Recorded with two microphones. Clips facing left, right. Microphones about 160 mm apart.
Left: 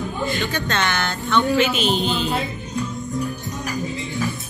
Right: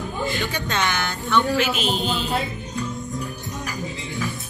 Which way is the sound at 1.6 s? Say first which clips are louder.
Left 3 dB; centre (ahead or behind).